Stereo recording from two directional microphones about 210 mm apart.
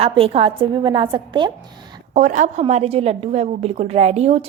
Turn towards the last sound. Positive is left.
turn(degrees=-30)  # may be behind; listen again after turning